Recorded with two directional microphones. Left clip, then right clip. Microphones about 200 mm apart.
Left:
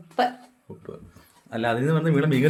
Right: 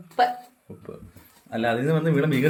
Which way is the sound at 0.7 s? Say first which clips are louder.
Left 2 dB; 10° left (ahead or behind).